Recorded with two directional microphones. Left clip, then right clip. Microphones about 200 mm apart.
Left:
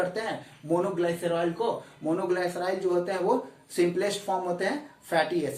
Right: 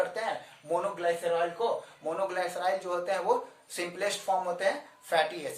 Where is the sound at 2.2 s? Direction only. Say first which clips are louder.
Even; 15° right (ahead or behind).